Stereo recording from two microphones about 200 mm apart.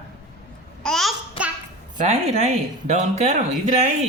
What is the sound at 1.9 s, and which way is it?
Speech, 35° right (ahead or behind).